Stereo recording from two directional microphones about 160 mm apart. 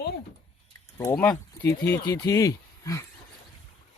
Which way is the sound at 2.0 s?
25° left (ahead or behind).